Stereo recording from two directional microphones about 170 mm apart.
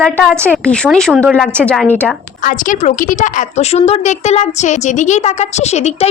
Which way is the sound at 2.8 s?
40° left (ahead or behind).